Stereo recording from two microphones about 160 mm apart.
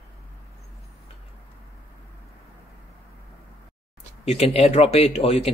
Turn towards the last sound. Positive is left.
turn(degrees=40)  # may be behind; listen again after turning